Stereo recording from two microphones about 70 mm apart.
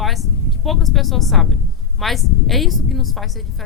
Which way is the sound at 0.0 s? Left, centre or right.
Centre.